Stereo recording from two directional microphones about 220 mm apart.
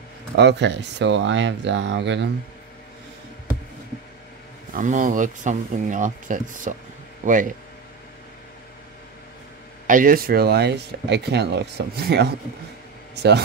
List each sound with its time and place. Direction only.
0.4 s speech: 50° right (ahead or behind)
4.7 s speech: 35° right (ahead or behind)
9.8 s speech: 40° right (ahead or behind)